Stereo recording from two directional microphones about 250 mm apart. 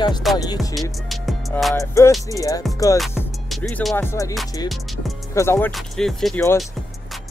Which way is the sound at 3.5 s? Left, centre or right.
Centre.